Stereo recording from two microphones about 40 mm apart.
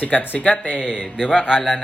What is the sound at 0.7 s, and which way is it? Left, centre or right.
Speech, right.